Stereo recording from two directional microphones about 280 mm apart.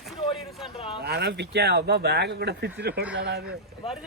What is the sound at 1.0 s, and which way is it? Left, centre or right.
Speech, right.